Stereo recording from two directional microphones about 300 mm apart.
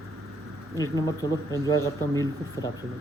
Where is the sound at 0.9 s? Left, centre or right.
Centre.